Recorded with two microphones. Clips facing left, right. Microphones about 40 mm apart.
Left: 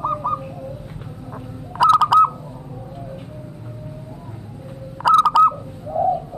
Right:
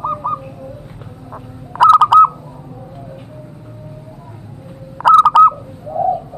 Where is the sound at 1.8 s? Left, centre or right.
Right.